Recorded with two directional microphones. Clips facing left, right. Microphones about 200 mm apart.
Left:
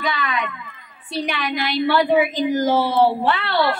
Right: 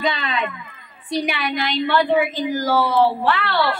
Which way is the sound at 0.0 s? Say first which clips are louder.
Right 1 dB; 25° right (ahead or behind).